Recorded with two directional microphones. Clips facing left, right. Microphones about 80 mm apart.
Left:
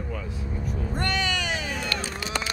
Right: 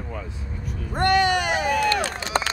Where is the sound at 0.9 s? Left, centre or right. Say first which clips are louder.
Right 10 dB; right.